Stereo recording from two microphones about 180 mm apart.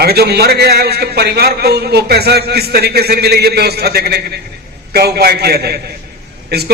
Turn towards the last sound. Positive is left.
turn(degrees=-65)  # may be behind; listen again after turning